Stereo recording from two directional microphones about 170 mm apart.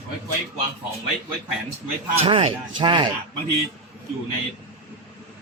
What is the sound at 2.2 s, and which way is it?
Speech, 30° right (ahead or behind).